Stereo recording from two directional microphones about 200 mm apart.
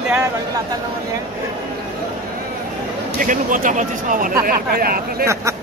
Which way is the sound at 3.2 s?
40° right (ahead or behind).